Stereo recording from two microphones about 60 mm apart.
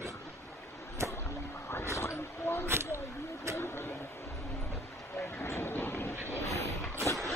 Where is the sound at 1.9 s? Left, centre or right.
Left.